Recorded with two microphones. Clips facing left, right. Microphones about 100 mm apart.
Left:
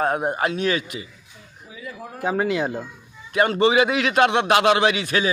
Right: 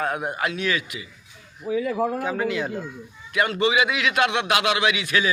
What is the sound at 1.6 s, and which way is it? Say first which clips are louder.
Speech: right 14 dB; 65° right (ahead or behind).